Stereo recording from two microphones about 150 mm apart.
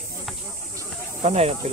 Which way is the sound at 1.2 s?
45° right (ahead or behind).